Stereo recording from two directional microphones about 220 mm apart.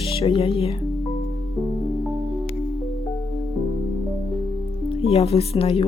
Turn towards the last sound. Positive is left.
turn(degrees=25)  # may be behind; listen again after turning